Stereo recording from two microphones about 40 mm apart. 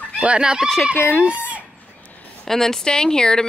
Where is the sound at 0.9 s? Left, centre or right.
Left.